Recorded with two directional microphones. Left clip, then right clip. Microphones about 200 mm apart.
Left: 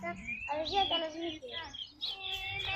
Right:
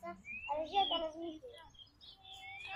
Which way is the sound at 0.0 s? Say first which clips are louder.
Left 7 dB; 40° left (ahead or behind).